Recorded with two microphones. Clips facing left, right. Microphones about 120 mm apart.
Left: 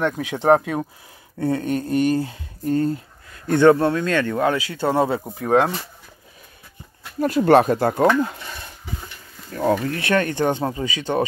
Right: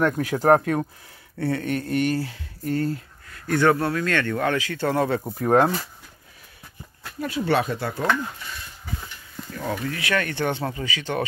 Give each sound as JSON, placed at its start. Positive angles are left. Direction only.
{"t": 0.2, "sound": "speech", "side_deg": 25}
{"t": 0.6, "sound": "speech", "side_deg": 10}
{"t": 5.2, "sound": "speech", "side_deg": 5}
{"t": 7.2, "sound": "speech", "side_deg": 45}
{"t": 9.5, "sound": "speech", "side_deg": 40}
{"t": 10.0, "sound": "speech", "side_deg": 30}
{"t": 10.6, "sound": "speech", "side_deg": 25}